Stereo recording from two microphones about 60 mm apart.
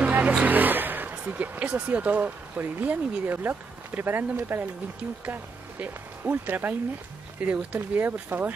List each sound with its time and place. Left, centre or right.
0.0 s vehicle: right
1.2 s speech: right